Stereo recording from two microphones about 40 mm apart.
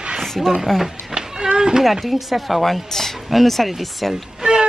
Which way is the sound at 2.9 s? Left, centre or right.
Centre.